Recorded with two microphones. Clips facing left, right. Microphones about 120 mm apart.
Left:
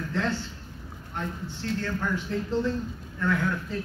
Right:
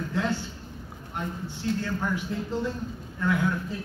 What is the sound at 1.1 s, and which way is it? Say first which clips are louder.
Speech: even; 15° right (ahead or behind).